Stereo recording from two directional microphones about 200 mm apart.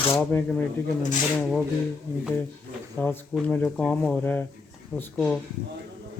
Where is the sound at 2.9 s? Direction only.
10° left (ahead or behind).